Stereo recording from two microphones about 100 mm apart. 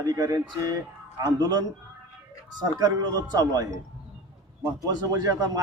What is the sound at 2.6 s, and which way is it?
Speech, 40° right (ahead or behind).